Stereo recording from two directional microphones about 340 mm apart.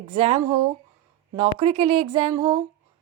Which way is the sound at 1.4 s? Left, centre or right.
Centre.